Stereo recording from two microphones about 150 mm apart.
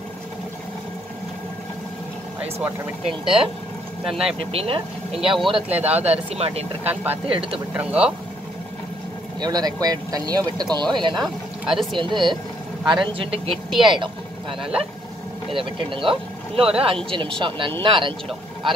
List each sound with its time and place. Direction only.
3.1 s speech: 5° right (ahead or behind)
4.3 s speech: 40° right (ahead or behind)
5.2 s speech: centre (ahead or behind)
6.3 s speech: 40° right (ahead or behind)
6.9 s speech: 10° right (ahead or behind)
7.2 s speech: 35° right (ahead or behind)
7.7 s speech: 10° right (ahead or behind)
9.4 s speech: 25° right (ahead or behind)
11.7 s speech: centre (ahead or behind)
12.0 s speech: 30° right (ahead or behind)
14.6 s speech: 5° right (ahead or behind)
15.5 s speech: 35° right (ahead or behind)